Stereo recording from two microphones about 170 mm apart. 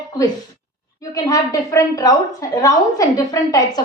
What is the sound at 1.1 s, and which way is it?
A woman's voice, 20° left (ahead or behind).